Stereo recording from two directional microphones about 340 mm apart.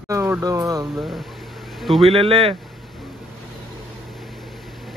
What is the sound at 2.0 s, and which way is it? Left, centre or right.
Speech, centre.